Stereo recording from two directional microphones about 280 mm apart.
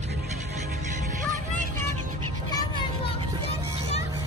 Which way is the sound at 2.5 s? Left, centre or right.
Centre.